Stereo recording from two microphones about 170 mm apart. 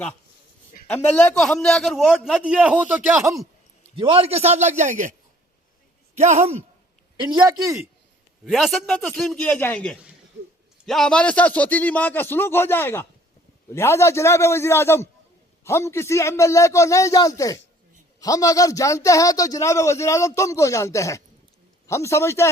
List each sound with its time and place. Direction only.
0.9 s a man's voice: 10° left (ahead or behind); by 3.4 s 15° right (ahead or behind)
3.9 s a man's voice: 35° right (ahead or behind)
6.1 s a man's voice: 40° right (ahead or behind)
7.2 s a man's voice: 25° right (ahead or behind)
8.4 s a man's voice: centre (ahead or behind)